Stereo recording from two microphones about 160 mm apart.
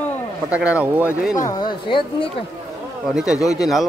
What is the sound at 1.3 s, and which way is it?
Speech, 25° left (ahead or behind).